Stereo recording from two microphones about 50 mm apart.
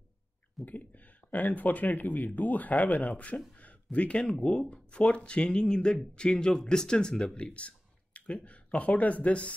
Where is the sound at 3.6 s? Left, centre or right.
Left.